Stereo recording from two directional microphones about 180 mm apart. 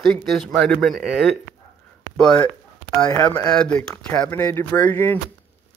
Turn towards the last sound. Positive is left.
turn(degrees=10)  # may be behind; listen again after turning